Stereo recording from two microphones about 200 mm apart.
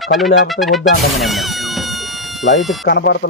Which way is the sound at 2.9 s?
55° left (ahead or behind).